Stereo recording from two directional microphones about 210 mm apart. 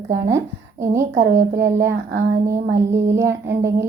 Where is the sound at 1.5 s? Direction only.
15° right (ahead or behind).